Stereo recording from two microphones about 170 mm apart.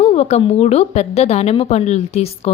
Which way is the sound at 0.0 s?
40° left (ahead or behind).